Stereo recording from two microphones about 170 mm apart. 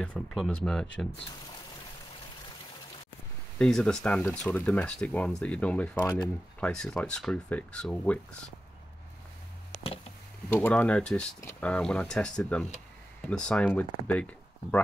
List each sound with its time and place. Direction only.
0.0 s speech: 5° left (ahead or behind)
3.5 s speech: 5° left (ahead or behind)
5.9 s speech: 20° left (ahead or behind)
6.6 s speech: 5° left (ahead or behind)
10.5 s speech: 10° left (ahead or behind)